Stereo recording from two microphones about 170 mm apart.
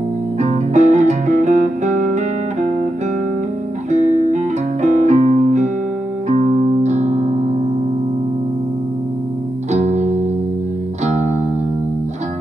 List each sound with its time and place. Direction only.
0.4 s music: 45° right (ahead or behind)
3.9 s music: 45° right (ahead or behind)
9.7 s music: 40° right (ahead or behind)